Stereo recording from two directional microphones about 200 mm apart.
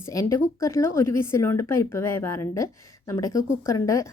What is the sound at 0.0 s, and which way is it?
A woman's voice, 15° left (ahead or behind).